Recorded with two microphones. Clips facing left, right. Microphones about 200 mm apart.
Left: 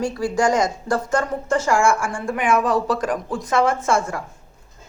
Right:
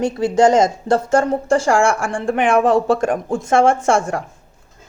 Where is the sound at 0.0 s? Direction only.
20° right (ahead or behind).